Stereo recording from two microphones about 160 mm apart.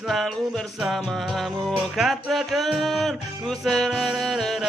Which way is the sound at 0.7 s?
Centre (ahead or behind).